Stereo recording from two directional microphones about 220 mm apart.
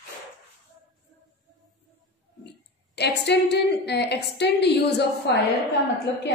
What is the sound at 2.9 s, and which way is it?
A woman's voice, 50° left (ahead or behind).